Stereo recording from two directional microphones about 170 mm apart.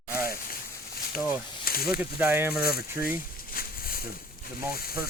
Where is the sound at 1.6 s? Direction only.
60° left (ahead or behind).